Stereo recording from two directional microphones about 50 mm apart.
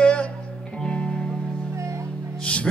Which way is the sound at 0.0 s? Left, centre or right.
Left.